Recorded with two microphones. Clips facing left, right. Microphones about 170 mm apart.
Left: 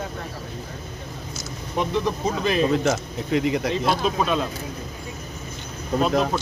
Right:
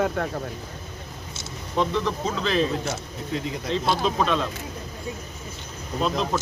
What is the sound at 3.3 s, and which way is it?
Speech, 85° left.